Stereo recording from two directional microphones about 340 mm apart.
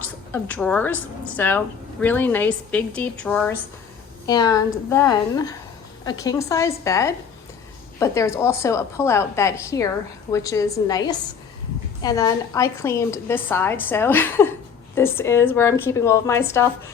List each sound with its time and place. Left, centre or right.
0.4 s a woman's voice: centre